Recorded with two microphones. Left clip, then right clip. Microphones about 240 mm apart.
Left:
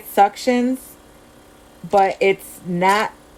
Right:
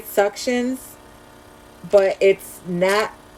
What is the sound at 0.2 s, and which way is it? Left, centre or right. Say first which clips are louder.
Speech: left 4 dB; centre.